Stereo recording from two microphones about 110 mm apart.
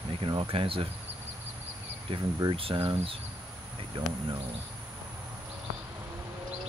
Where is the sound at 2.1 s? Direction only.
55° right (ahead or behind).